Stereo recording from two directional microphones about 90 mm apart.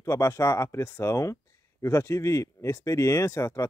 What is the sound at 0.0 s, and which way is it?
Speech, 35° left (ahead or behind).